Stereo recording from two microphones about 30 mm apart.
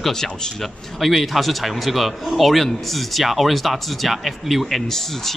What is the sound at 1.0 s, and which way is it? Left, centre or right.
Speech, centre.